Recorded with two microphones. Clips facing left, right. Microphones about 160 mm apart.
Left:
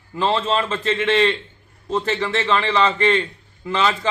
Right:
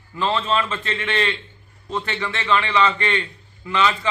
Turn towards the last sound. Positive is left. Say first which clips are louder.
# even
turn(degrees=35)  # may be behind; listen again after turning